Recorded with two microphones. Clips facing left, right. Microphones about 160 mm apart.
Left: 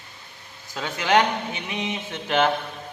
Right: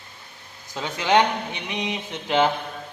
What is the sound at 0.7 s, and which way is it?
A man's voice, 20° right (ahead or behind).